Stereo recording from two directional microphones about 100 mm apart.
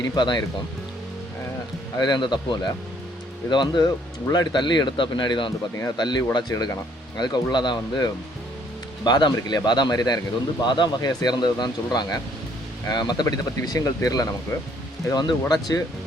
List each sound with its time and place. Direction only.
0.0 s speech: 45° left (ahead or behind)
2.0 s speech: 45° left (ahead or behind)